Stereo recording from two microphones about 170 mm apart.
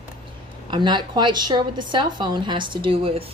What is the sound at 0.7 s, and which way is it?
A woman's voice, 25° right (ahead or behind).